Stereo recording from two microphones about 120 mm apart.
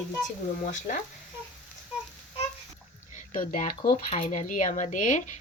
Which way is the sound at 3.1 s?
90° left.